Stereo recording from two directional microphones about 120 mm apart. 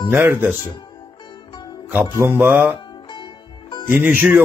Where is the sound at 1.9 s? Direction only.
15° right (ahead or behind).